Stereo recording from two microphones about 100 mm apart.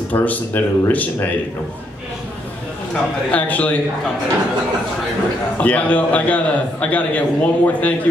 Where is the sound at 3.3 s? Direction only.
15° left (ahead or behind).